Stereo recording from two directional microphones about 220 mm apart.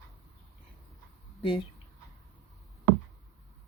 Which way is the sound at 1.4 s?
25° left (ahead or behind).